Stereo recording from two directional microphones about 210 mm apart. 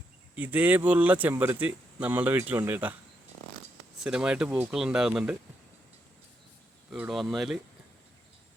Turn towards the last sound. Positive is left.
turn(degrees=0)  # may be behind; listen again after turning